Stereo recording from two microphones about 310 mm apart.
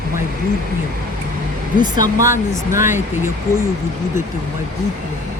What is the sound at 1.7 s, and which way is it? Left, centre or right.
Speech, centre.